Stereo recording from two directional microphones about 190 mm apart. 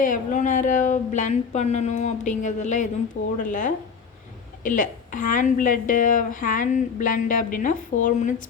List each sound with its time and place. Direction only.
0.0 s a woman's voice: 40° left (ahead or behind)